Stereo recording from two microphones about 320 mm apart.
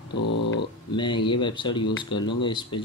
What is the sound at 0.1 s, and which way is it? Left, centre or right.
Speech, left.